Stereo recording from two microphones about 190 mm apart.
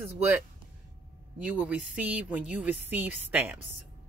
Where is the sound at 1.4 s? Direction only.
5° right (ahead or behind).